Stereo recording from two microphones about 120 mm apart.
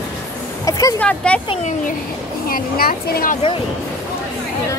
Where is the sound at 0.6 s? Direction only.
30° left (ahead or behind).